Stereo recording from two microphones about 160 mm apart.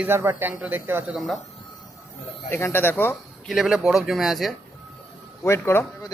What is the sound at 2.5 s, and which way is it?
Speech, 15° left (ahead or behind).